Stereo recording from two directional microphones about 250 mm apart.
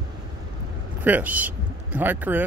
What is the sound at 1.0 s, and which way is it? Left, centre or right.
Speech, centre.